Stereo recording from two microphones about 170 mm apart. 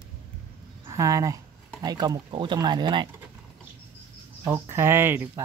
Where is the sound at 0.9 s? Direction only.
20° right (ahead or behind).